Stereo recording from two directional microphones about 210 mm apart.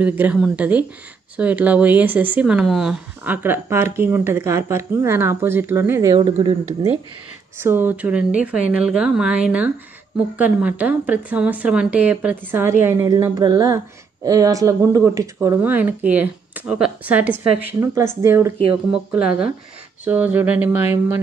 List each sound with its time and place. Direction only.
0.0 s speech: 10° right (ahead or behind)
7.6 s speech: 10° right (ahead or behind)